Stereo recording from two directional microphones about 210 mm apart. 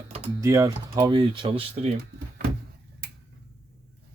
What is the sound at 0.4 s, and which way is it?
Speech, 15° right (ahead or behind).